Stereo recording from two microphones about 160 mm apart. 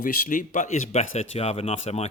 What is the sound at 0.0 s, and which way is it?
Speech, 60° left (ahead or behind).